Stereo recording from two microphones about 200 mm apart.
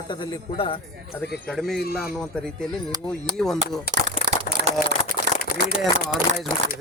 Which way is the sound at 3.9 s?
50° left (ahead or behind).